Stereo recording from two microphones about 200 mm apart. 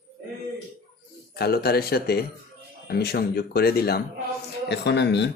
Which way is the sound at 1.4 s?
50° left (ahead or behind).